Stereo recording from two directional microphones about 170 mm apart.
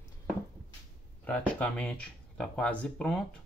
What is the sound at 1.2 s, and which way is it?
Speech, 10° left (ahead or behind).